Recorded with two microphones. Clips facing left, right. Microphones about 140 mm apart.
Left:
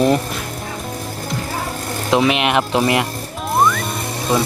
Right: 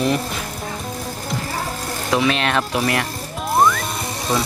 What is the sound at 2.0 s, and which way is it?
Speech, 20° left (ahead or behind).